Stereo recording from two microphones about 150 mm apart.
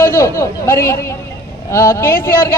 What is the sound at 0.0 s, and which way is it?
A man's voice, 20° left (ahead or behind).